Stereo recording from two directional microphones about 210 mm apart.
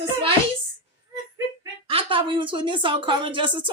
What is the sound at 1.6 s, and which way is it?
Speech, 25° right (ahead or behind).